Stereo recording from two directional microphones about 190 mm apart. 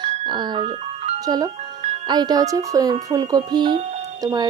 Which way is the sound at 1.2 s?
20° right (ahead or behind).